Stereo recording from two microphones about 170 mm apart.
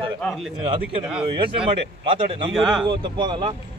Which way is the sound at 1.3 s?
30° right (ahead or behind).